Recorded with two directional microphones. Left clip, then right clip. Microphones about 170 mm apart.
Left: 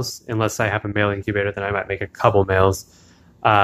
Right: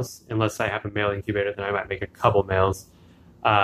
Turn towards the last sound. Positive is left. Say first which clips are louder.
# left 4 dB
turn(degrees=35)  # may be behind; listen again after turning